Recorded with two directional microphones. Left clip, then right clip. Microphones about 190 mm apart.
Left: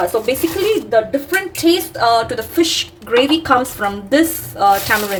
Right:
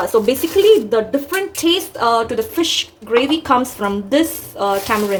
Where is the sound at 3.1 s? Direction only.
Centre (ahead or behind).